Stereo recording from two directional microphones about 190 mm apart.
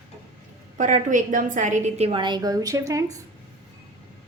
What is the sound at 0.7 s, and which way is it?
A woman's voice, 40° right (ahead or behind).